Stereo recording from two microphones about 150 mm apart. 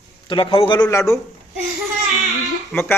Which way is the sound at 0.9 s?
20° left (ahead or behind).